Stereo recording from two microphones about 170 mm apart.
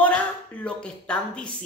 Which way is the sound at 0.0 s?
10° left (ahead or behind).